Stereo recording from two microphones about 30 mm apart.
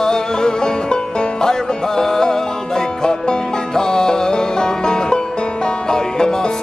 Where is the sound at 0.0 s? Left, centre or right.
Left.